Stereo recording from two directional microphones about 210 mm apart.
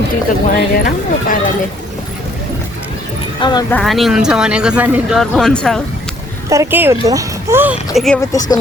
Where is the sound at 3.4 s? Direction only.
20° left (ahead or behind).